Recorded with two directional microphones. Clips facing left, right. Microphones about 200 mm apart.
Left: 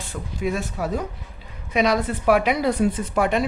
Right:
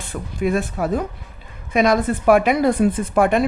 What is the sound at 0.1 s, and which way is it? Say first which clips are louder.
Speech: right 5 dB; 55° right (ahead or behind).